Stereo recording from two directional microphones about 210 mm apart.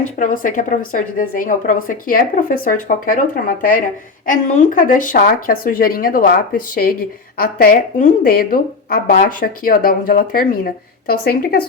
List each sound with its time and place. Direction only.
0.2 s a woman's voice: 40° left (ahead or behind)
7.3 s speech: 45° left (ahead or behind)